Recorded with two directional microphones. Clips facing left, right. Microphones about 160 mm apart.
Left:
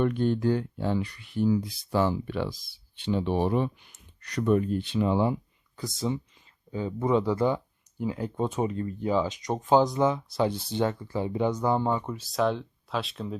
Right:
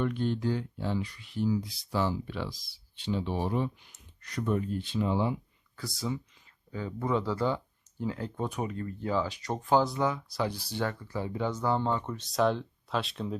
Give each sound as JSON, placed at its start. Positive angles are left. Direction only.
{"t": 0.0, "sound": "speech", "side_deg": 50}
{"t": 5.7, "sound": "speech", "side_deg": 20}